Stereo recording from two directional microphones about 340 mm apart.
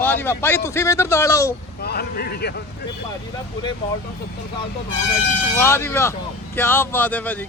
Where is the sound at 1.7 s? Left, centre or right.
Left.